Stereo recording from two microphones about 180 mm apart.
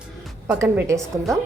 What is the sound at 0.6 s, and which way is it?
Speech, 15° right (ahead or behind).